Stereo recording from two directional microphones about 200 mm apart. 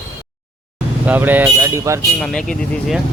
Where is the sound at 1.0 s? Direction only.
10° right (ahead or behind).